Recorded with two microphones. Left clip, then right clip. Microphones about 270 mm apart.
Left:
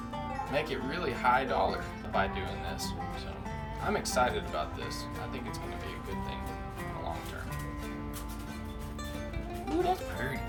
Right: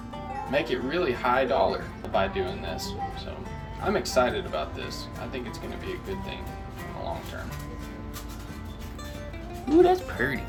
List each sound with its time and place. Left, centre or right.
0.3 s speech: centre
9.8 s speech: centre